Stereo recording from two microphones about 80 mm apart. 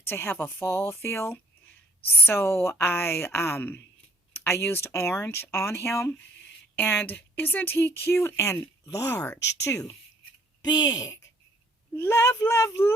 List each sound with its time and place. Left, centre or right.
0.0 s speech: left
10.6 s speech: left
12.1 s speech: left